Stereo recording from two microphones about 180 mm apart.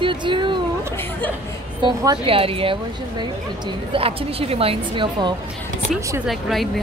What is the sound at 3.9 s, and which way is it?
A woman's voice, 30° right (ahead or behind).